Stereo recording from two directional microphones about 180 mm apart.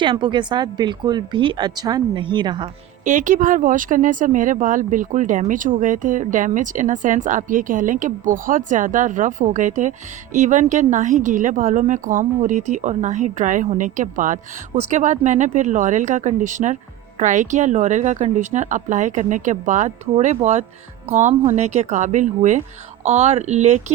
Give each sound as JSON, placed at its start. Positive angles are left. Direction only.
{"t": 0.0, "sound": "speech", "side_deg": -25}
{"t": 3.0, "sound": "speech", "side_deg": -45}